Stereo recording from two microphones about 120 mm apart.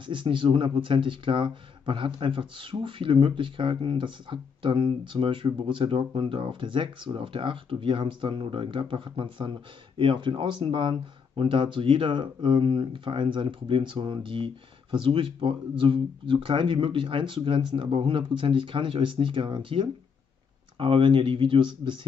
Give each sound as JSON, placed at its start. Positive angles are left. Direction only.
{"t": 0.0, "sound": "speech", "side_deg": -45}